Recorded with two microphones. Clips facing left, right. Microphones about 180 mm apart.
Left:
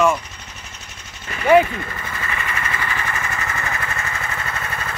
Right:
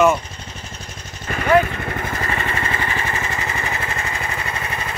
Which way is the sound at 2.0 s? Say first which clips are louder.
Right 5 dB; 40° right (ahead or behind).